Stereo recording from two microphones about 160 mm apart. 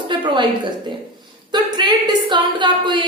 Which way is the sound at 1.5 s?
25° right (ahead or behind).